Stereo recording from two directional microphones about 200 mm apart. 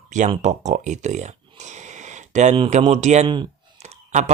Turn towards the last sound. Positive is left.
turn(degrees=-35)  # may be behind; listen again after turning